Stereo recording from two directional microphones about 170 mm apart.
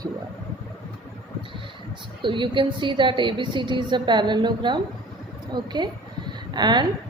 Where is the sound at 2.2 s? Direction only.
30° right (ahead or behind).